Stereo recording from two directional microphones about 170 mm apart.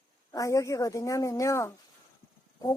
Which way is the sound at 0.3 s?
20° left (ahead or behind).